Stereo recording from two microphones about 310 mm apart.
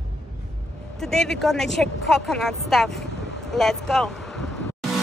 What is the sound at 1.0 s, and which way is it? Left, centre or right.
A woman's voice, centre.